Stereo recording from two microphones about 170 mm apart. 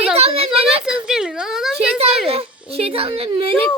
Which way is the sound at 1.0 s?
5° right (ahead or behind).